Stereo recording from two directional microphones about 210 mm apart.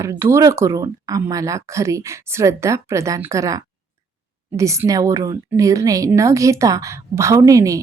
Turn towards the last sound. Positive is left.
turn(degrees=-15)  # may be behind; listen again after turning